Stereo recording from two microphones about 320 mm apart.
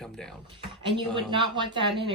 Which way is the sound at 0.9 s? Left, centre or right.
Centre.